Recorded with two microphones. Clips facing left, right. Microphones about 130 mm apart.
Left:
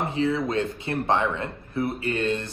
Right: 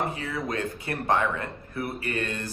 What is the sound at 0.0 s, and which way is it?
A man's voice, 25° left (ahead or behind).